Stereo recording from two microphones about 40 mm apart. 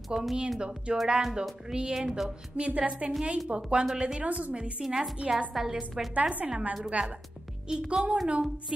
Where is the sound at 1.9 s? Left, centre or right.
Centre.